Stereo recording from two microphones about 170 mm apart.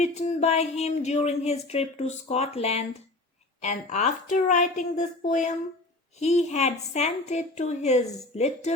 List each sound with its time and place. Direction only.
0.0 s a woman's voice: 40° left (ahead or behind)